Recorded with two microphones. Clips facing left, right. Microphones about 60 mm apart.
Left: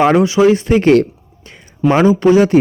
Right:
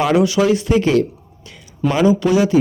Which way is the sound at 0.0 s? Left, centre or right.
Left.